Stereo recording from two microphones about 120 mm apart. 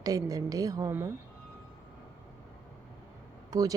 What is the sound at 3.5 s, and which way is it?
Speech, 30° right (ahead or behind).